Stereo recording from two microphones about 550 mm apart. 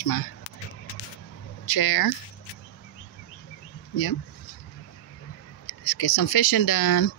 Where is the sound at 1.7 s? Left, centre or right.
Left.